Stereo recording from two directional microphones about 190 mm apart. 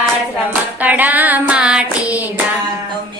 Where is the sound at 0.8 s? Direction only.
10° right (ahead or behind).